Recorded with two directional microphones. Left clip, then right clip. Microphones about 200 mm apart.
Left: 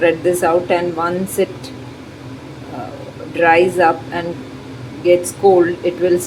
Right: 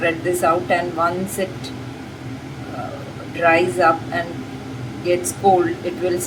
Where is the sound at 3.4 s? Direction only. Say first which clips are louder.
Left 4 dB; 25° left (ahead or behind).